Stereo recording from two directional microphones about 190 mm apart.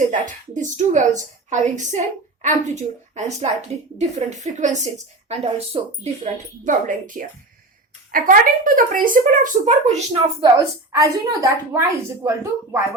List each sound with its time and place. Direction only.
0.1 s a woman's voice: 40° right (ahead or behind)
10.9 s a woman's voice: 15° right (ahead or behind)